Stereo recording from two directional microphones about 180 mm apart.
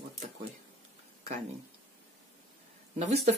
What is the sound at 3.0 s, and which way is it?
Speech, 35° right (ahead or behind).